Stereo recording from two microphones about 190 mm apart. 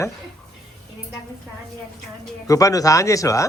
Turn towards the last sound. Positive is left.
turn(degrees=15)  # may be behind; listen again after turning